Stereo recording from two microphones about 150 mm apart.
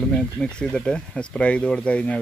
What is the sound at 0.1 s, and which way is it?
Speech, 5° left (ahead or behind).